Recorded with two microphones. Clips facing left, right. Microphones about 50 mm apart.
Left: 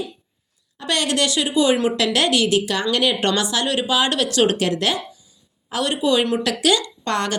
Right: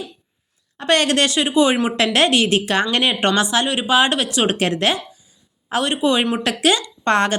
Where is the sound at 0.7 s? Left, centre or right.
Right.